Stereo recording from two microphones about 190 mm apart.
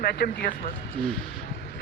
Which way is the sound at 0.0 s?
55° left (ahead or behind).